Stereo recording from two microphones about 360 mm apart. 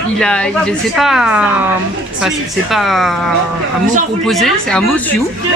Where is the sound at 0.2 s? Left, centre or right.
Centre.